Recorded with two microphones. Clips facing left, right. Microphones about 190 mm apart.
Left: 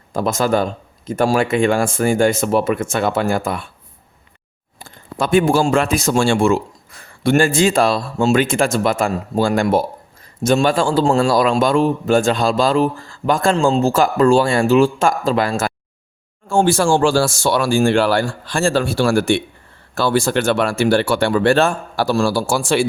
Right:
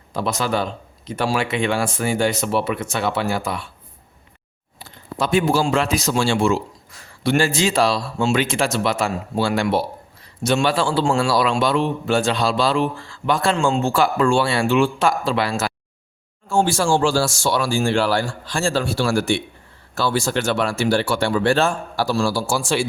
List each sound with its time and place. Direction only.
0.1 s a man's voice: 50° left (ahead or behind)
4.8 s a man's voice: 50° left (ahead or behind)